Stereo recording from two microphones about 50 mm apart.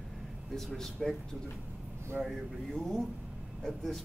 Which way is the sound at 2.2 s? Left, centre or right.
Centre.